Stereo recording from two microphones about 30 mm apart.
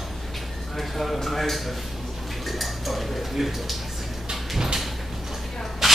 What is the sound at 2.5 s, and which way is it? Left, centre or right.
Dishes, centre.